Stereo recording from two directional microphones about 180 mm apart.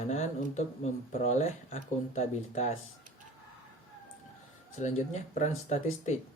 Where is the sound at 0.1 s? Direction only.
40° left (ahead or behind).